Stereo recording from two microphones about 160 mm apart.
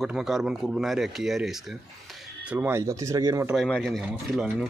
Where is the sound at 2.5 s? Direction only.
15° right (ahead or behind).